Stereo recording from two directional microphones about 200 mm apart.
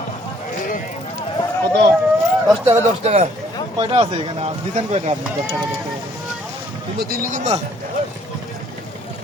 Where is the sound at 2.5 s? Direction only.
20° right (ahead or behind).